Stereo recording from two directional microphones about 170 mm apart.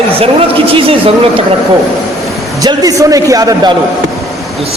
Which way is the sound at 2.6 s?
20° right (ahead or behind).